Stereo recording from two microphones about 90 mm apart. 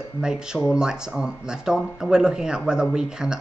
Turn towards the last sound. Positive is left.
turn(degrees=-5)  # may be behind; listen again after turning